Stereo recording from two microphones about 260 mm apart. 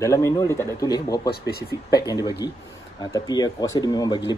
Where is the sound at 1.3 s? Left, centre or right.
Left.